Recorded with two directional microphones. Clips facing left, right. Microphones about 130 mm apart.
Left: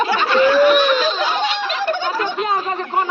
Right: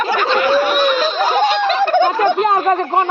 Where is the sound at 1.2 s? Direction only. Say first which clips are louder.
Right 6 dB; 45° right (ahead or behind).